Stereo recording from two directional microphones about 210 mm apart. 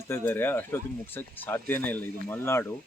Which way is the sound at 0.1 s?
10° left (ahead or behind).